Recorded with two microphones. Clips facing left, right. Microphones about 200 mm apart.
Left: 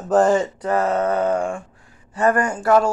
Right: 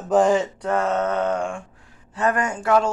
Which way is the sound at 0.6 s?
5° left (ahead or behind).